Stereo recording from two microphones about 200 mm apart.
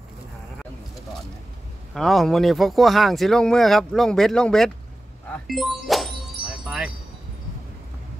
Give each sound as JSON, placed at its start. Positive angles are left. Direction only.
{"t": 2.0, "sound": "speech", "side_deg": 0}
{"t": 6.4, "sound": "music", "side_deg": 45}